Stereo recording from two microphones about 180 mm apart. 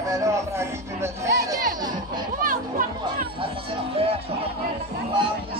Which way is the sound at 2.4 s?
50° right (ahead or behind).